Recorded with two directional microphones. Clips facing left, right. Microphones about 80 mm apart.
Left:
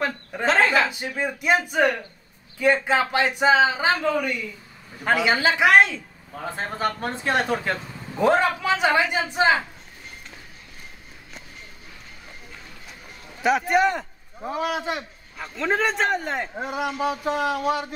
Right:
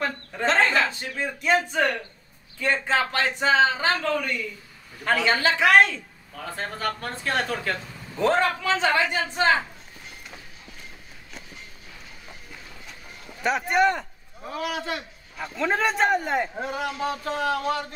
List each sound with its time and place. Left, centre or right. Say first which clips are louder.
0.3 s a man's voice: left 2 dB; centre
6.3 s a man's voice: left 3 dB; left
13.4 s a man's voice: left 2 dB; centre
14.4 s speech: left 4 dB; left
15.3 s a man's voice: left 1 dB; centre
16.5 s a man's voice: left 2 dB; centre